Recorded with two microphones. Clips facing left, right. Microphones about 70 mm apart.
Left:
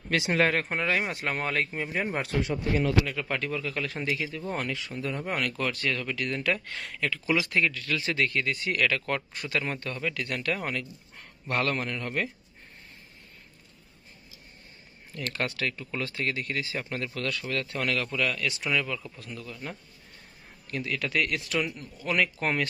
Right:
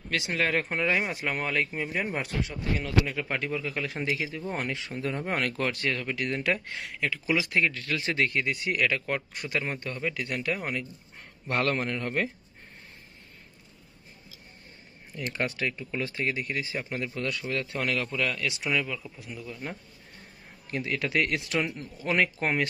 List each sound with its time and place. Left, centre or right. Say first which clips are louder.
0.1 s speech: left 3 dB; centre
3.1 s speech: even; centre
6.8 s speech: even; centre
7.5 s speech: even; right
8.5 s speech: even; centre
11.4 s a man's voice: right 1 dB; right
15.1 s speech: right 1 dB; centre
18.6 s speech: even; centre
20.7 s a man's voice: right 1 dB; right